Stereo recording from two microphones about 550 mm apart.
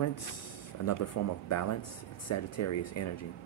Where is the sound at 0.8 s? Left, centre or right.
Left.